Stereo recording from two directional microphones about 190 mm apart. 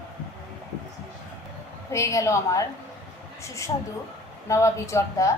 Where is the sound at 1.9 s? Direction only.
15° left (ahead or behind).